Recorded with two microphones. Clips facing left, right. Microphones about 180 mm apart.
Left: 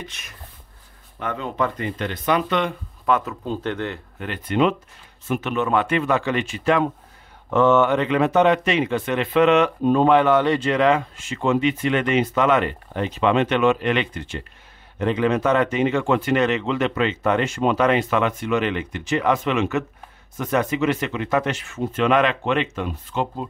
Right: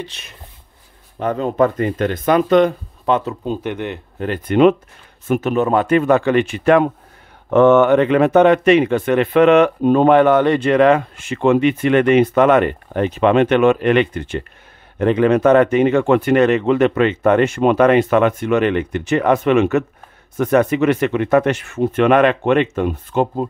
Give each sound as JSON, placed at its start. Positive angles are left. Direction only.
{"t": 0.0, "sound": "speech", "side_deg": -30}
{"t": 3.1, "sound": "speech", "side_deg": -25}
{"t": 3.5, "sound": "speech", "side_deg": -15}
{"t": 4.5, "sound": "speech", "side_deg": -55}
{"t": 5.3, "sound": "speech", "side_deg": -40}